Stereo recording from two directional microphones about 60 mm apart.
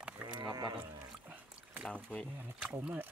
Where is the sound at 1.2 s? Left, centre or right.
Right.